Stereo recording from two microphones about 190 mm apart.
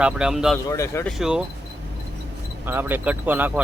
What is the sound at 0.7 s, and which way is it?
Speech, 15° left (ahead or behind).